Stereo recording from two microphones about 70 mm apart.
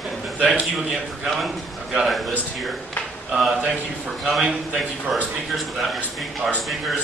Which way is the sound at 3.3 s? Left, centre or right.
Centre.